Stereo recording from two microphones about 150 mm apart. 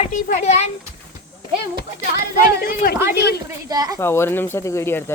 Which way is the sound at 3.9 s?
15° left (ahead or behind).